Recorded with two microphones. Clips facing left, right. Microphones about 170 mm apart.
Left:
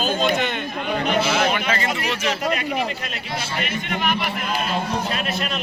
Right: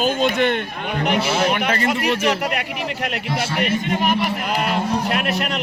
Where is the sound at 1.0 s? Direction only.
65° right (ahead or behind).